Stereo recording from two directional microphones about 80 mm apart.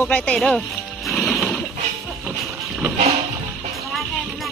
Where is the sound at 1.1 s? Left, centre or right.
Centre.